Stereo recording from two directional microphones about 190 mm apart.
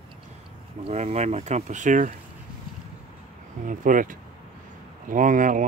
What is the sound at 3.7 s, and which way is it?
Speech, 45° right (ahead or behind).